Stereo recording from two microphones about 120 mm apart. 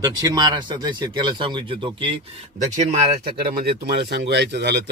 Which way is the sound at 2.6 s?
80° right.